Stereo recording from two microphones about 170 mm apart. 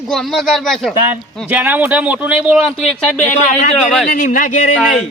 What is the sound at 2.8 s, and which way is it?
Speech, 45° left (ahead or behind).